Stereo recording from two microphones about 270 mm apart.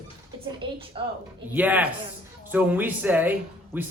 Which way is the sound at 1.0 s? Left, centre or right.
Centre.